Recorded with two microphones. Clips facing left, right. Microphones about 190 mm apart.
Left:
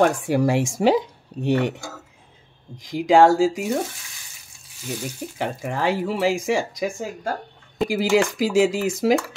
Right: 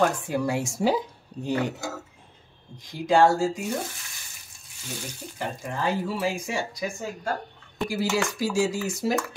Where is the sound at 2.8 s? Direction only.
90° left.